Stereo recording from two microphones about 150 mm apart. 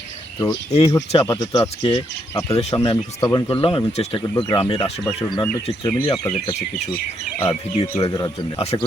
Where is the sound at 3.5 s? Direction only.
40° left (ahead or behind).